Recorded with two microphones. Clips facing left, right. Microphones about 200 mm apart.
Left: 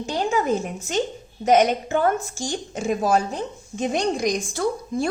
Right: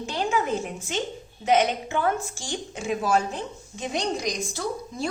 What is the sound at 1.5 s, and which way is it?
A woman's voice, 40° left (ahead or behind).